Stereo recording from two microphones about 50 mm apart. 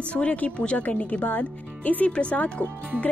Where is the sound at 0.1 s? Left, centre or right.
Left.